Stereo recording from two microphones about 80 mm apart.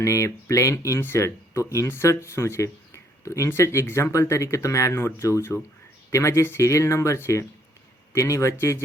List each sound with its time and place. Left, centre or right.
0.0 s speech: left